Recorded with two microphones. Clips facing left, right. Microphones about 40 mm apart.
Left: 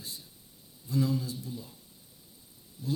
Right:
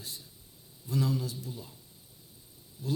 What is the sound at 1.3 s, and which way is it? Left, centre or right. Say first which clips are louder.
Speech: left 2 dB; right.